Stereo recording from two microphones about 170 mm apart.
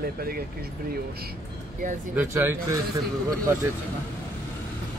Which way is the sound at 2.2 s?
15° right (ahead or behind).